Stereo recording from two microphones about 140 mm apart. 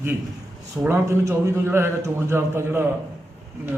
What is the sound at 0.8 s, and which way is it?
A man's voice, 20° right (ahead or behind).